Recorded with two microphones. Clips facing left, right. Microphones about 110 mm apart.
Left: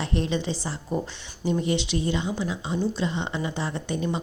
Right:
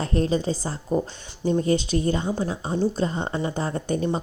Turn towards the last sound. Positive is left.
turn(degrees=-45)  # may be behind; listen again after turning